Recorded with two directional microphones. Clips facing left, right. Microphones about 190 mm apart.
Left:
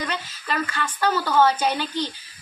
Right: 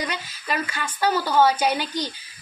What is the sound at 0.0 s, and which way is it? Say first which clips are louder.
A woman's voice: even; 10° right (ahead or behind).